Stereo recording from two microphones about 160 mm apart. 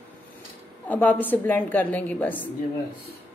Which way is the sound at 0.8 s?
10° left (ahead or behind).